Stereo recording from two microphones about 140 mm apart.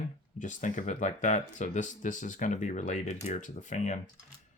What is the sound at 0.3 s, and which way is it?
Speech, 60° left (ahead or behind).